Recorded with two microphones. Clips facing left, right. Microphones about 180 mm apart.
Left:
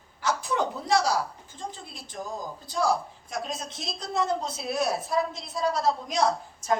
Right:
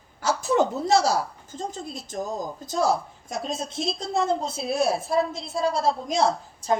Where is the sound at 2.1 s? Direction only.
45° right (ahead or behind).